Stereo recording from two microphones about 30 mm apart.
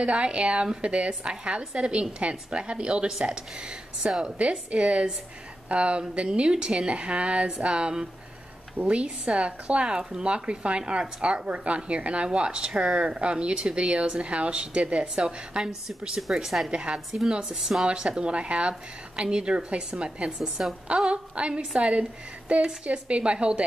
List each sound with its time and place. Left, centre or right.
0.0 s speech: right
3.1 s speech: right
4.4 s a woman's voice: right
15.2 s speech: right
16.3 s speech: right
17.5 s speech: centre
17.9 s a woman's voice: right
22.5 s speech: right
22.8 s speech: right